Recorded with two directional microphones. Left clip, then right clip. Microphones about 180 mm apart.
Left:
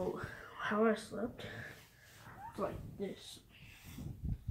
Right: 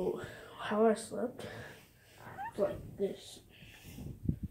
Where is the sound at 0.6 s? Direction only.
10° left (ahead or behind).